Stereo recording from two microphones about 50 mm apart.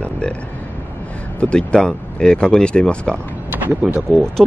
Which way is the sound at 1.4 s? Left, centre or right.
Left.